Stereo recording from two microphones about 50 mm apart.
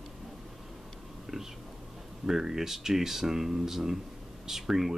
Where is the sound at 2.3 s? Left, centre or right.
Centre.